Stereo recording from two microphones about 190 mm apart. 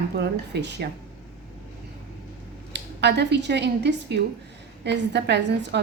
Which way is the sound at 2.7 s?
65° right (ahead or behind).